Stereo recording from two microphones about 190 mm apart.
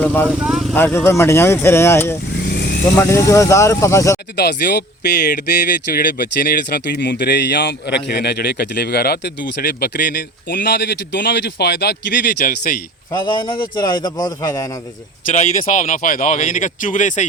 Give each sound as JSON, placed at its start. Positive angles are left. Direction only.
{"t": 0.0, "sound": "speech", "side_deg": 10}
{"t": 0.3, "sound": "speech", "side_deg": -5}
{"t": 0.7, "sound": "speech", "side_deg": 10}
{"t": 2.5, "sound": "vehicle", "side_deg": 60}
{"t": 2.9, "sound": "speech", "side_deg": 15}
{"t": 4.4, "sound": "speech", "side_deg": 60}
{"t": 13.1, "sound": "a man's voice", "side_deg": 25}
{"t": 15.3, "sound": "speech", "side_deg": 40}